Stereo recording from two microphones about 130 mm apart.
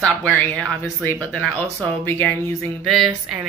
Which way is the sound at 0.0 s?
10° left (ahead or behind).